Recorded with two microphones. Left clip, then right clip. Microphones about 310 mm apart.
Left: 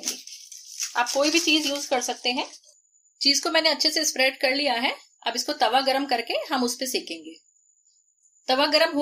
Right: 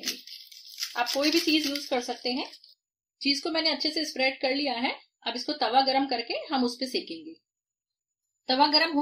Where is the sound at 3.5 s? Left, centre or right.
Left.